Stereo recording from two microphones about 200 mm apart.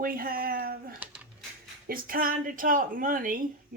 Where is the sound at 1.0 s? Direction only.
10° right (ahead or behind).